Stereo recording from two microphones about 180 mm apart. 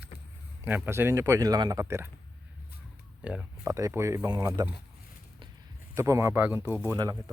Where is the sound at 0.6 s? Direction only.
15° right (ahead or behind).